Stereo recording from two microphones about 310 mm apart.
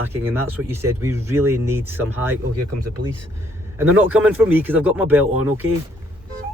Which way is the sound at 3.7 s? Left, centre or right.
Centre.